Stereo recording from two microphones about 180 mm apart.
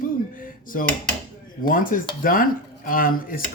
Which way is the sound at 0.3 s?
50° left (ahead or behind).